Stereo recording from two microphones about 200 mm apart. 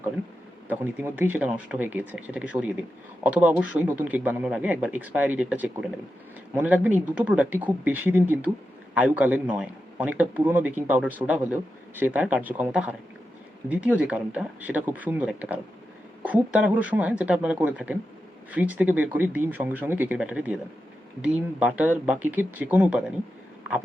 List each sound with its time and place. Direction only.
0.7 s a man's voice: 10° right (ahead or behind)